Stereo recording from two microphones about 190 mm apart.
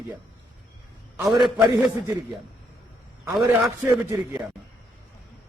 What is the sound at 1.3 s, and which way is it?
Speech, 10° right (ahead or behind).